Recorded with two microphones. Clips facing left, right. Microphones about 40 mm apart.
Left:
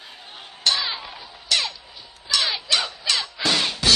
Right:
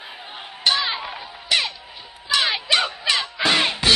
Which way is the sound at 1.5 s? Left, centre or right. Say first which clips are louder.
Right 2 dB; right.